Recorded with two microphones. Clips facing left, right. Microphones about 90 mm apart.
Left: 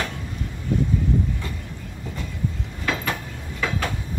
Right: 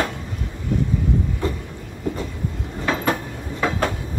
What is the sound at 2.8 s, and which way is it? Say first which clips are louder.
Train: right 5 dB; 30° right (ahead or behind).